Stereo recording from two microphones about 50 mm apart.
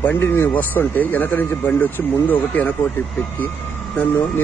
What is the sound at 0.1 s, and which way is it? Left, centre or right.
Speech, left.